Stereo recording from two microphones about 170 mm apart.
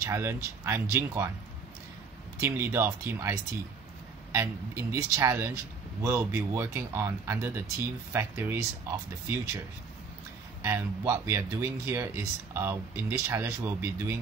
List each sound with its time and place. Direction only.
0.0 s speech: 15° right (ahead or behind)
2.4 s speech: 15° right (ahead or behind)
10.6 s speech: 15° right (ahead or behind)